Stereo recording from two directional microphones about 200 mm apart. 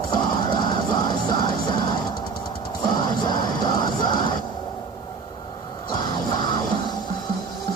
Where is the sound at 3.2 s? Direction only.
20° left (ahead or behind).